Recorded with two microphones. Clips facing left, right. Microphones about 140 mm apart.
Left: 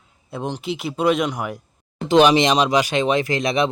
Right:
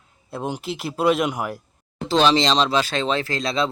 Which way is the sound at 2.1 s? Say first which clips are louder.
Left 4 dB; 15° left (ahead or behind).